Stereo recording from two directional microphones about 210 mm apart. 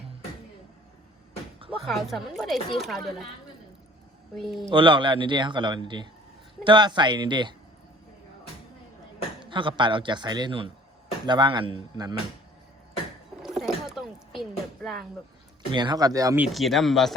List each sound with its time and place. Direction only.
1.8 s speech: centre (ahead or behind)
4.4 s speech: centre (ahead or behind)
4.7 s speech: 25° right (ahead or behind)
9.4 s speech: 25° right (ahead or behind)
13.4 s a sound: centre (ahead or behind)
15.7 s speech: 20° right (ahead or behind); by 17.2 s centre (ahead or behind)